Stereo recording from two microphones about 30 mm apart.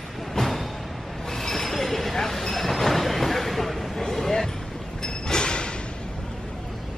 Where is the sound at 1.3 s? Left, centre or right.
Centre.